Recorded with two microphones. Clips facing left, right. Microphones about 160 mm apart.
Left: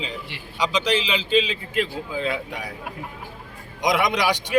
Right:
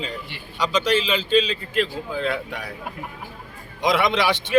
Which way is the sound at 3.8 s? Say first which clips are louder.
Right 1 dB; 15° left (ahead or behind).